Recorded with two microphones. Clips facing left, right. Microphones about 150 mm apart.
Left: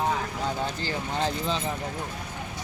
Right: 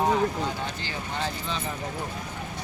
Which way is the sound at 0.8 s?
35° left (ahead or behind).